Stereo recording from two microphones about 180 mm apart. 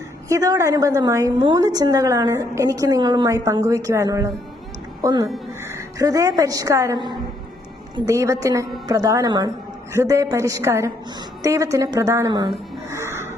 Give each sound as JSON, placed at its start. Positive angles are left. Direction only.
{"t": 0.3, "sound": "a woman's voice", "side_deg": -20}